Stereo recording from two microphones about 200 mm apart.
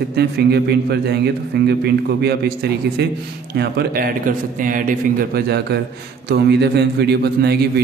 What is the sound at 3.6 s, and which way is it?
A man's voice, 50° right (ahead or behind).